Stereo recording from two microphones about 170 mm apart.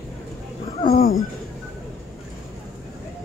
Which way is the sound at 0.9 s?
60° left (ahead or behind).